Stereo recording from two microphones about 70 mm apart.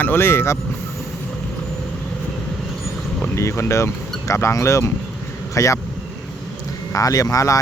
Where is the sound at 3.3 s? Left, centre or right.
Left.